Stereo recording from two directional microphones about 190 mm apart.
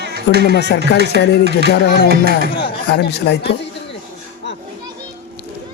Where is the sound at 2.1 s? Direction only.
55° right (ahead or behind).